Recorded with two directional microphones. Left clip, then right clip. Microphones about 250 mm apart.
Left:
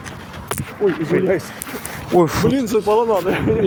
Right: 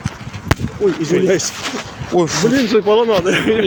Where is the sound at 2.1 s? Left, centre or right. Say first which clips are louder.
Right 1 dB; centre.